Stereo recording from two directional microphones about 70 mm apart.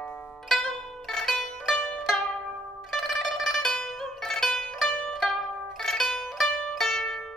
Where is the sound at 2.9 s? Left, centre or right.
Centre.